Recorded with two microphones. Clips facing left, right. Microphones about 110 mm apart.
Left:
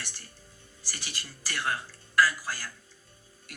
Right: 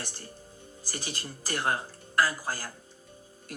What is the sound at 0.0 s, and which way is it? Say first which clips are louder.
Speech: right 4 dB; 35° right (ahead or behind).